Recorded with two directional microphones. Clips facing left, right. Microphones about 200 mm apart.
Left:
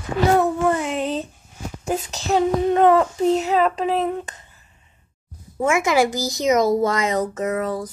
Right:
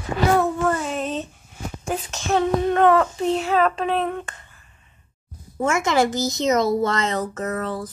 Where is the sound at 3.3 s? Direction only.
20° left (ahead or behind).